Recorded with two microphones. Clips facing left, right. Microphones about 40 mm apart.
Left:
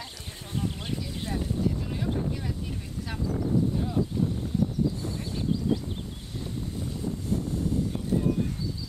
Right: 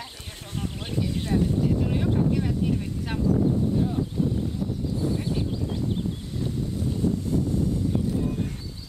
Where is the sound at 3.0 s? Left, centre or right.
Right.